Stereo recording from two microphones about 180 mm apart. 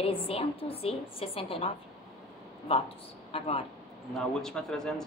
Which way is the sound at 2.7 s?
30° left (ahead or behind).